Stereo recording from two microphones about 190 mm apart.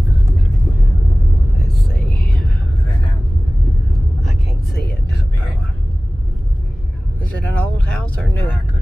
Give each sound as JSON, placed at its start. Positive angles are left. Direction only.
{"t": 1.7, "sound": "a sound", "side_deg": 0}
{"t": 4.2, "sound": "vehicle", "side_deg": 0}
{"t": 7.2, "sound": "vehicle", "side_deg": 5}